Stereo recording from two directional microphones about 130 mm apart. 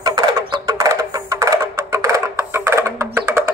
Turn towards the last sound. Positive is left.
turn(degrees=-20)  # may be behind; listen again after turning